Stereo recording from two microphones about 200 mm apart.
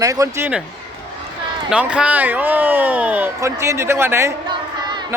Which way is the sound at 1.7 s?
5° right (ahead or behind).